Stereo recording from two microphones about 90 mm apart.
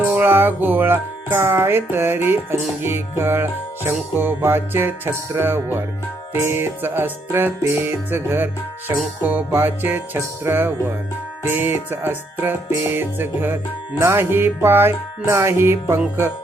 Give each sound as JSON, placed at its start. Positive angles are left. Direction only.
{"t": 0.0, "sound": "music", "side_deg": -25}